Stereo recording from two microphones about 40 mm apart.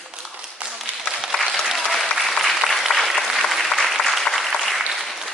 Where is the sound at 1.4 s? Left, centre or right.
Centre.